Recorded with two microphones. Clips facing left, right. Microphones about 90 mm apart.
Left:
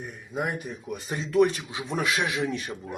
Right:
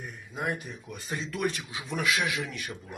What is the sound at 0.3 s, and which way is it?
Speech, 15° left (ahead or behind).